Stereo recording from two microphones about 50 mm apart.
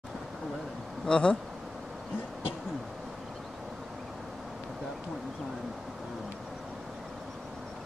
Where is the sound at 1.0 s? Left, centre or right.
Centre.